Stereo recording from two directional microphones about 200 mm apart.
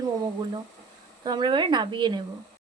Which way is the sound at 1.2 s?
20° right (ahead or behind).